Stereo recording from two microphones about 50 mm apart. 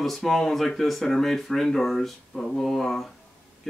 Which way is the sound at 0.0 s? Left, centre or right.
Centre.